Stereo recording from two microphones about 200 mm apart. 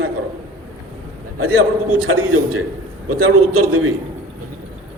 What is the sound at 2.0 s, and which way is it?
Speech, 90° right.